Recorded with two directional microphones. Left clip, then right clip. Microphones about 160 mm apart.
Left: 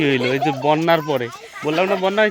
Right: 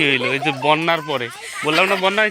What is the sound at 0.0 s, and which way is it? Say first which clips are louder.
Speech: right 1 dB; 35° left (ahead or behind).